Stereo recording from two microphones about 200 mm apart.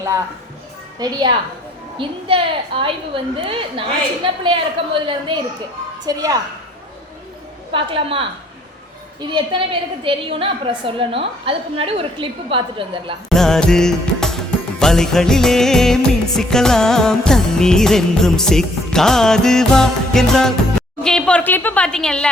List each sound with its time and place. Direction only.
0.9 s a woman's voice: 20° right (ahead or behind)
7.7 s a woman's voice: 25° right (ahead or behind)
13.3 s music: centre (ahead or behind)